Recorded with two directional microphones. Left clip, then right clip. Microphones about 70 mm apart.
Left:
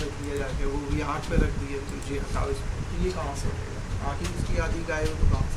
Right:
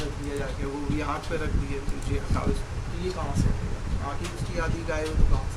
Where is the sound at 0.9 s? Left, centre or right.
Centre.